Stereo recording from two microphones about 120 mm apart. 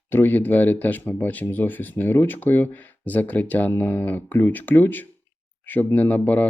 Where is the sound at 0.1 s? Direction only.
15° left (ahead or behind).